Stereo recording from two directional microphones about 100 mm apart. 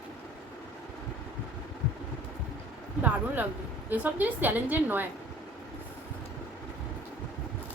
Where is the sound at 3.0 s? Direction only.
15° right (ahead or behind).